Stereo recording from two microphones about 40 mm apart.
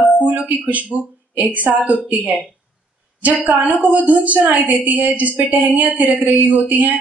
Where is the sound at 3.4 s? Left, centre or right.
Right.